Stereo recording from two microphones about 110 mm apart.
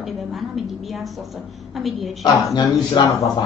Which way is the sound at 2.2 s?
40° left (ahead or behind).